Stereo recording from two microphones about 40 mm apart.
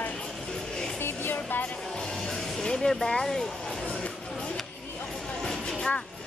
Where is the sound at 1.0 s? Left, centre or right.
Left.